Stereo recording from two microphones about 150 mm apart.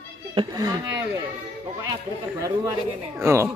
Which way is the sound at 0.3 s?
25° right (ahead or behind).